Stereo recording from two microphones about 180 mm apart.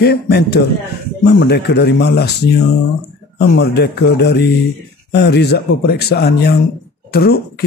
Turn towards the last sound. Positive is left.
turn(degrees=60)  # may be behind; listen again after turning